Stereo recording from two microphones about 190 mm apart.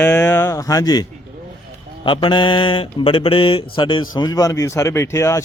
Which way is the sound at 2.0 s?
25° left (ahead or behind).